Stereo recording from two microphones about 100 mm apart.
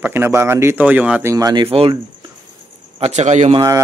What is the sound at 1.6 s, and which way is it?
Speech, 65° right (ahead or behind).